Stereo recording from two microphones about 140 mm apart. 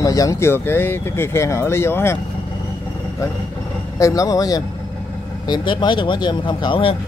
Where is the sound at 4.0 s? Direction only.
25° left (ahead or behind).